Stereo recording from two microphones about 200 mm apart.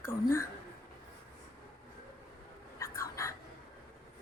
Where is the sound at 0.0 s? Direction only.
15° left (ahead or behind).